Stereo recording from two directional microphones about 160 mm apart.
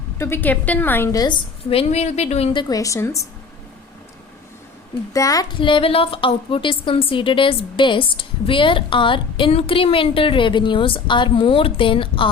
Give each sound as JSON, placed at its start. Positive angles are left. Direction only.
{"t": 0.2, "sound": "a woman's voice", "side_deg": 15}
{"t": 1.7, "sound": "a woman's voice", "side_deg": 40}
{"t": 5.1, "sound": "a woman's voice", "side_deg": 20}